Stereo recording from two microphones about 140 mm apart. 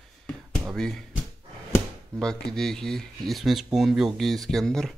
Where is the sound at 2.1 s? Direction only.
5° left (ahead or behind).